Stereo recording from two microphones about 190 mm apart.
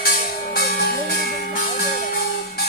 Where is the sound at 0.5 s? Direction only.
55° left (ahead or behind).